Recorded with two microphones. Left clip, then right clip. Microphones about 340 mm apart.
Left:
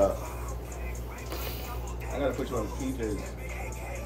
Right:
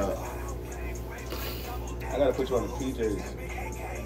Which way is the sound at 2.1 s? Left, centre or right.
Centre.